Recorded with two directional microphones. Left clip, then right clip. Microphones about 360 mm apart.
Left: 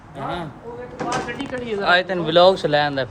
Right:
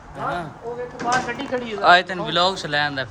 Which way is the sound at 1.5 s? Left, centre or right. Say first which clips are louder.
Right 3 dB; centre.